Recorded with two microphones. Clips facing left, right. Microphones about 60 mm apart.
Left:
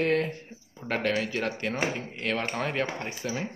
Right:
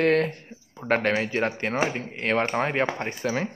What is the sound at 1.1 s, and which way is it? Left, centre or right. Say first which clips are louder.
Speech: right 4 dB; right.